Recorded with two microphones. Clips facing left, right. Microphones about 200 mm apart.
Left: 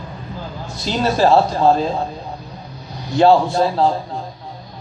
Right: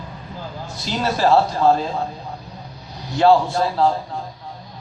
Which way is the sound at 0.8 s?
20° left (ahead or behind).